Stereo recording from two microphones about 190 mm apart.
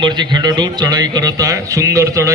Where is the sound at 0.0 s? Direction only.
25° right (ahead or behind).